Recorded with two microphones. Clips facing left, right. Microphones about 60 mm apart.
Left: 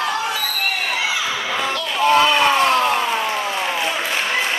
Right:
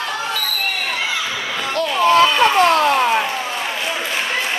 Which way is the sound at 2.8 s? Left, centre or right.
Right.